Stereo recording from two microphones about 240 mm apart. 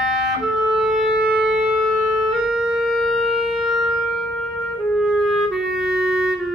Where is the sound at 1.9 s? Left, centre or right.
Right.